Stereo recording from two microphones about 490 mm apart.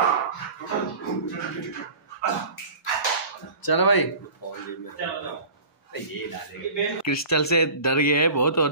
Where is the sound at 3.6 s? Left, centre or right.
Left.